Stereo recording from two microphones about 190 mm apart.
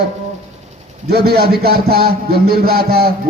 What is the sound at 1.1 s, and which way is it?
A man's voice, 55° right (ahead or behind).